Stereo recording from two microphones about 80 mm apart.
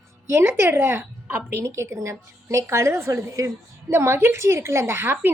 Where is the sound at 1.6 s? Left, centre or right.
Right.